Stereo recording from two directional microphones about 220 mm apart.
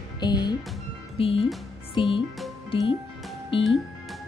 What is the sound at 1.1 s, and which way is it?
Speech, 25° left (ahead or behind).